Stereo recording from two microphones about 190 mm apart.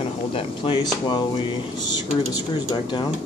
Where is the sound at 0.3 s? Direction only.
25° left (ahead or behind).